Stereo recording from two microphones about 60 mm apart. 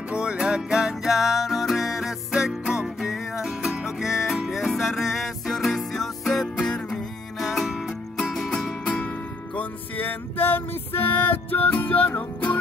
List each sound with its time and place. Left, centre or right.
0.1 s music: centre
8.5 s music: centre
9.6 s music: left